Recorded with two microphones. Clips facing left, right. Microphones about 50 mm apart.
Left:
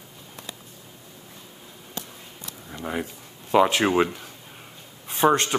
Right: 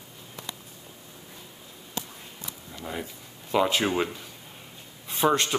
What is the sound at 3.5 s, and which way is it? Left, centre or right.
Speech, left.